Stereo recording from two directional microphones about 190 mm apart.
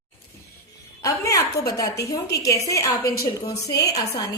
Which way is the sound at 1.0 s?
15° left (ahead or behind).